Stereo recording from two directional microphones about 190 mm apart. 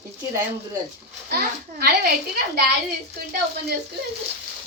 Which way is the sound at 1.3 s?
55° right (ahead or behind).